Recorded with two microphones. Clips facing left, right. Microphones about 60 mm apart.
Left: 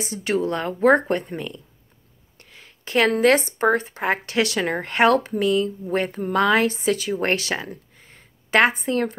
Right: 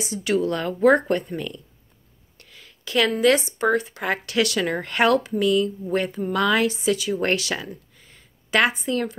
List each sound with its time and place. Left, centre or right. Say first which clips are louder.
0.0 s speech: right 1 dB; left
2.3 s a sound: left 1 dB; left
3.2 s a woman's voice: left 1 dB; left